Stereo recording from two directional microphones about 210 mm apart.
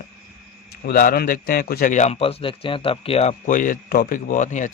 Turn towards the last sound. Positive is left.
turn(degrees=35)  # may be behind; listen again after turning